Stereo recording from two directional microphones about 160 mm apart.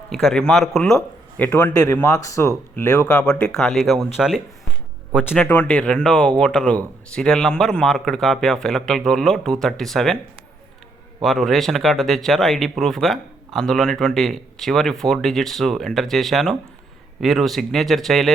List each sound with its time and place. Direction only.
0.1 s speech: centre (ahead or behind)
5.4 s speech: 10° left (ahead or behind)
11.2 s speech: centre (ahead or behind)